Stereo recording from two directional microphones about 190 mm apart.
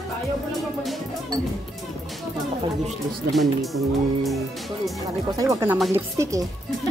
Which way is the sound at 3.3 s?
Centre (ahead or behind).